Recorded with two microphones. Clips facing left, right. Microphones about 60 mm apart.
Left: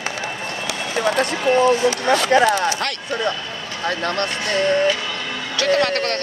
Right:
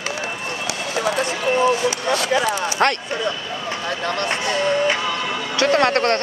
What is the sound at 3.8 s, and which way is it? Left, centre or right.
Speech, left.